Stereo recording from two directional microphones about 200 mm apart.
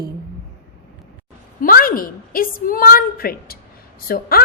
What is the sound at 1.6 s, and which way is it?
A woman's voice, 45° left (ahead or behind).